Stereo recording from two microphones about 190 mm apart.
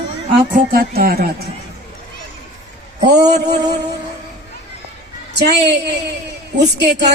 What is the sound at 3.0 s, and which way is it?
Music, 60° right (ahead or behind).